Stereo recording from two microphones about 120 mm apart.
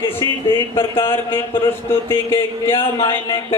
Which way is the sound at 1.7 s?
20° left (ahead or behind).